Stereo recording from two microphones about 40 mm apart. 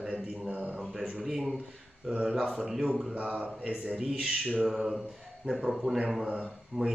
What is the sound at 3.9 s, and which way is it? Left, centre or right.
Speech, centre.